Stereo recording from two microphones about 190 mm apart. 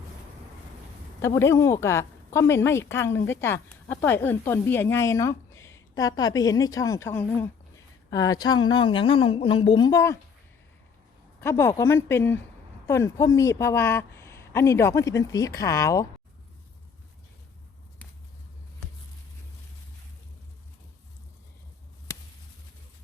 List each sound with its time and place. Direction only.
1.2 s a woman's voice: 15° left (ahead or behind)
11.3 s a woman's voice: 15° left (ahead or behind)
22.1 s a sound: 15° left (ahead or behind)